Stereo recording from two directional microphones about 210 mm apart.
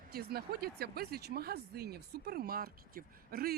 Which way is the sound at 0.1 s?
50° right (ahead or behind).